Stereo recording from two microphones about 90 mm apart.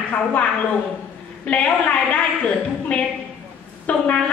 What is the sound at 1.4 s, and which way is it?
A woman's voice, 15° left (ahead or behind).